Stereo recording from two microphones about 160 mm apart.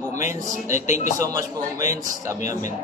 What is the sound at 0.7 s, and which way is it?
Speech, 50° left (ahead or behind).